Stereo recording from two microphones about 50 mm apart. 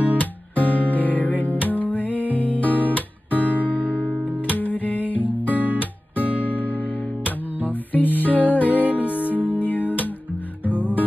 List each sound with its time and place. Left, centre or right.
0.2 s guitar: left
0.8 s music: left
3.3 s music: right
4.5 s music: left
6.2 s music: right
6.5 s music: left